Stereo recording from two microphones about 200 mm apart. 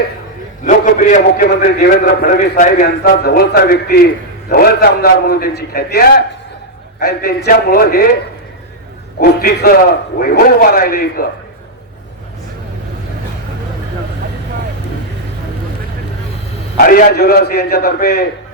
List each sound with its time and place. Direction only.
0.6 s a man's voice: 40° left (ahead or behind)
9.4 s a man's voice: 45° left (ahead or behind)
16.7 s a man's voice: 45° left (ahead or behind)